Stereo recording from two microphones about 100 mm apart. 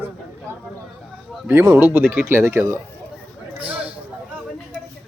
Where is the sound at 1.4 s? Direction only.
25° right (ahead or behind).